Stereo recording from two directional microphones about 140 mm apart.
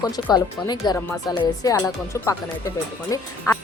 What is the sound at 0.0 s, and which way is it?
Speech, 30° left (ahead or behind).